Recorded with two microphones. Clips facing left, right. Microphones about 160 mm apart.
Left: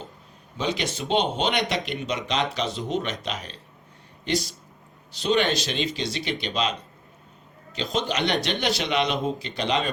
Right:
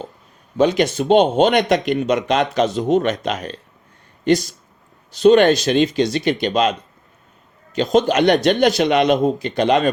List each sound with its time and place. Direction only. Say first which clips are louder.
0.5 s speech: right 12 dB; 50° right (ahead or behind)